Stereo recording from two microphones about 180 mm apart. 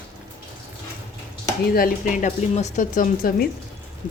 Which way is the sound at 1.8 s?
40° left (ahead or behind).